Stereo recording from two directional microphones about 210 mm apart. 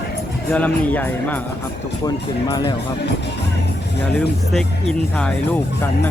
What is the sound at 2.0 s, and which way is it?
Speech, 20° left (ahead or behind).